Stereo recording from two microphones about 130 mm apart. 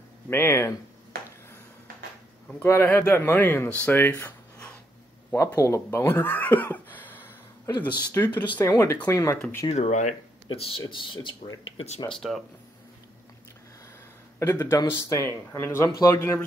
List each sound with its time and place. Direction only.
0.3 s speech: 20° left (ahead or behind)
2.6 s a man's voice: 15° left (ahead or behind)
9.7 s speech: 60° left (ahead or behind)
10.5 s speech: 45° left (ahead or behind)
11.1 s speech: 30° left (ahead or behind)
11.6 s speech: 50° left (ahead or behind)
12.1 s speech: centre (ahead or behind)
14.4 s a man's voice: 30° left (ahead or behind)